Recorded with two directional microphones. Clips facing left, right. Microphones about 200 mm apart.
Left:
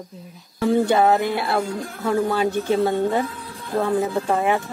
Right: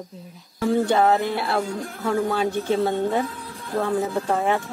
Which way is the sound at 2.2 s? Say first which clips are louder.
Left 2 dB; centre (ahead or behind).